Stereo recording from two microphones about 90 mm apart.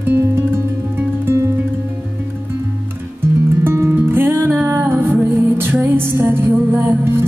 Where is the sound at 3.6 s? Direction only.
25° right (ahead or behind).